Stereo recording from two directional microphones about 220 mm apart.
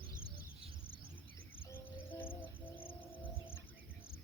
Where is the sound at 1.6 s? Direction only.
10° left (ahead or behind).